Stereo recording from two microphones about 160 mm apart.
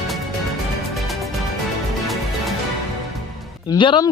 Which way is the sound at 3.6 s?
30° left (ahead or behind).